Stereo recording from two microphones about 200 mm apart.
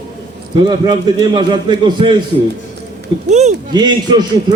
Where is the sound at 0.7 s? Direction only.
20° right (ahead or behind).